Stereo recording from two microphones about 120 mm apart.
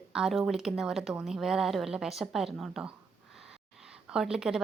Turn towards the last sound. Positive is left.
turn(degrees=-5)  # may be behind; listen again after turning